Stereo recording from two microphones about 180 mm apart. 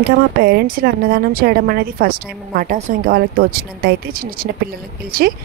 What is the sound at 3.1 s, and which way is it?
Speech, 55° right (ahead or behind).